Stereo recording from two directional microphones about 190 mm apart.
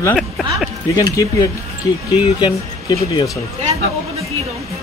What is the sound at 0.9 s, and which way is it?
Speech, 20° left (ahead or behind).